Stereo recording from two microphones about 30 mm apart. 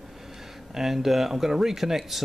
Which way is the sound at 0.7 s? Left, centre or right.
Centre.